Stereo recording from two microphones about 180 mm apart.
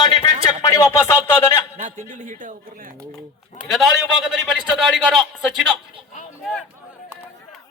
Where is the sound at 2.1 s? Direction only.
45° right (ahead or behind).